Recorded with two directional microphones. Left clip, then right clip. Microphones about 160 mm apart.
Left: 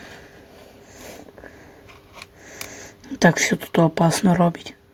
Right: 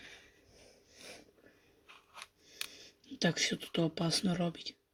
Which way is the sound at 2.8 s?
55° left (ahead or behind).